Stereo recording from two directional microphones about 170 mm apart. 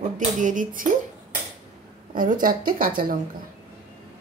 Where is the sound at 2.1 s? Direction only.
50° right (ahead or behind).